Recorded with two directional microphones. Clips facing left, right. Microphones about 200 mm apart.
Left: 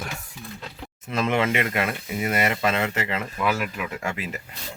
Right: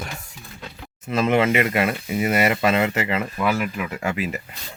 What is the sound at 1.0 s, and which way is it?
Speech, 5° right (ahead or behind).